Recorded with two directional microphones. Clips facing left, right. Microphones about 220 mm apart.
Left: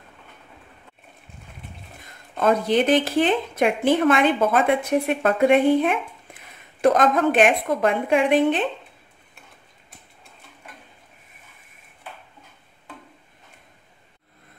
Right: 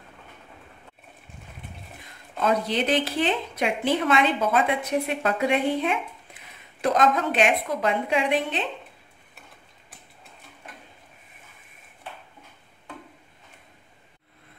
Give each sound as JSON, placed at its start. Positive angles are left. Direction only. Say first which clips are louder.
{"t": 2.4, "sound": "speech", "louder": "left 5 dB", "side_deg": 50}